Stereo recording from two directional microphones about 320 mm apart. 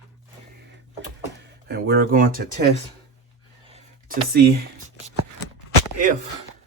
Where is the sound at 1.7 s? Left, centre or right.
Right.